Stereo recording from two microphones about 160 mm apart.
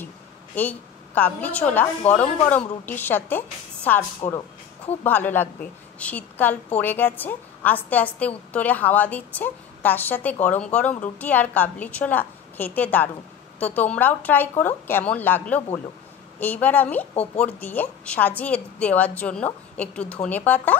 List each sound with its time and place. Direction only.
0.6 s a woman's voice: 10° left (ahead or behind)
4.2 s speech: 35° left (ahead or behind)
5.0 s a woman's voice: 10° left (ahead or behind)